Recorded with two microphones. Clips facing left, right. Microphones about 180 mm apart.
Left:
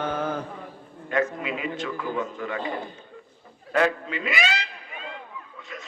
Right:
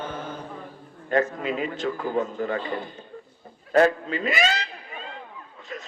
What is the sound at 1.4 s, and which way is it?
A man's voice, 40° right (ahead or behind).